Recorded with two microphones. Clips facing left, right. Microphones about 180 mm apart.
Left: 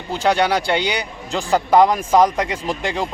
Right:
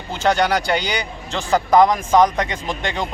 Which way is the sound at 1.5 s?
5° left (ahead or behind).